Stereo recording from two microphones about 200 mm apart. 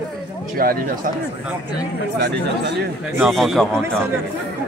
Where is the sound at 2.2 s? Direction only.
55° right (ahead or behind).